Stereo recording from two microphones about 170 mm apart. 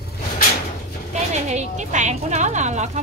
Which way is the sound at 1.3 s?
45° right (ahead or behind).